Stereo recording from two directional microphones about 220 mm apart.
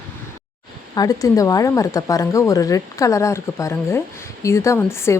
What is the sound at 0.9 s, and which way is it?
A woman's voice, 15° left (ahead or behind).